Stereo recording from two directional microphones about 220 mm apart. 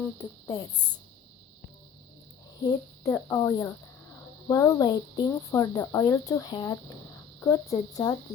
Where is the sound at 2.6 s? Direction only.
15° left (ahead or behind).